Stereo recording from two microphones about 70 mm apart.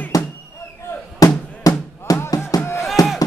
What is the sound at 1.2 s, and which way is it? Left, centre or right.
Drum, left.